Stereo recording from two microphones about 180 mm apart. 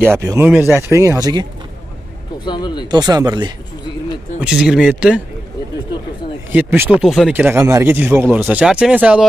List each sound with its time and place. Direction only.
0.0 s speech: 15° right (ahead or behind)
2.4 s speech: 25° left (ahead or behind)
2.9 s speech: 20° right (ahead or behind)
4.4 s speech: 5° right (ahead or behind)
6.5 s speech: 10° right (ahead or behind)
7.0 s speech: centre (ahead or behind)